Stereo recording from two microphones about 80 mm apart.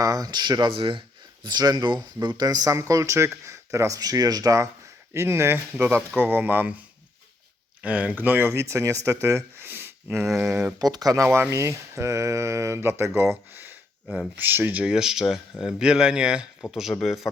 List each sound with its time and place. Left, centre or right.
0.0 s speech: right
1.5 s speech: right
5.1 s speech: right
9.6 s a sound: right
10.3 s speech: centre
10.8 s speech: right
11.3 s speech: right
14.9 s speech: centre